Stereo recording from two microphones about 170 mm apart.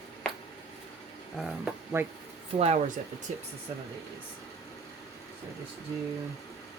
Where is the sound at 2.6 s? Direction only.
45° right (ahead or behind).